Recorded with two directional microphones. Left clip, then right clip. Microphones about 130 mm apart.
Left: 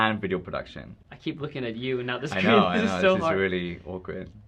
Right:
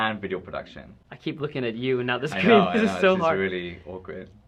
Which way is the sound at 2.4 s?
40° right (ahead or behind).